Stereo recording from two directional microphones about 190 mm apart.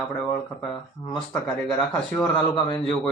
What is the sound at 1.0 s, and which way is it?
Speech, 15° left (ahead or behind).